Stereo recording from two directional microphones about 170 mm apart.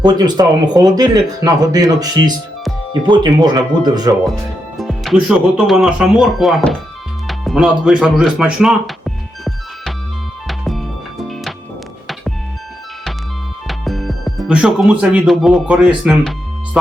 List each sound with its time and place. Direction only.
0.0 s speech: 25° right (ahead or behind)
4.8 s speech: centre (ahead or behind)
7.3 s music: centre (ahead or behind)
13.7 s speech: centre (ahead or behind)